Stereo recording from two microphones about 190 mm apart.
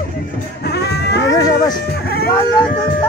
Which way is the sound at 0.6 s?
60° left (ahead or behind).